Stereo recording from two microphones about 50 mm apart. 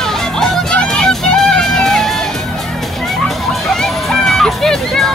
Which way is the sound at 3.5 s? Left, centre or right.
Centre.